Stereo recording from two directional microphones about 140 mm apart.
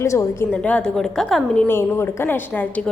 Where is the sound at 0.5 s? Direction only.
10° left (ahead or behind).